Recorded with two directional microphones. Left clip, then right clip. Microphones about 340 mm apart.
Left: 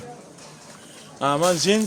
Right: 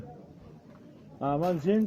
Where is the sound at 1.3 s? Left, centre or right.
Left.